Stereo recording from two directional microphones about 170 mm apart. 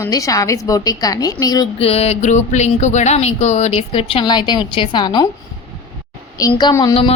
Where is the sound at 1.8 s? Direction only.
35° left (ahead or behind).